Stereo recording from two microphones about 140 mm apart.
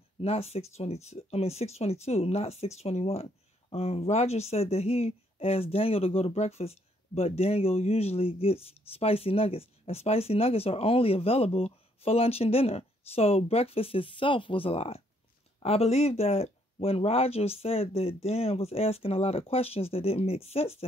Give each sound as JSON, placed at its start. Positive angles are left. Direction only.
{"t": 0.2, "sound": "speech", "side_deg": 45}